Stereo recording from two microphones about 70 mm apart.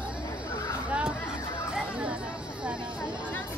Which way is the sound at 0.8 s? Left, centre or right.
Centre.